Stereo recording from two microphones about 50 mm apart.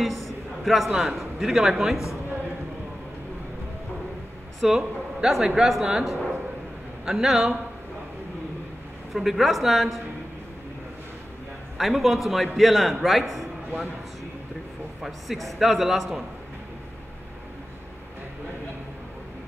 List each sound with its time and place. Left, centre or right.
0.0 s a man's voice: centre
4.6 s a man's voice: centre
9.1 s a man's voice: centre
11.8 s a man's voice: centre
15.0 s a man's voice: centre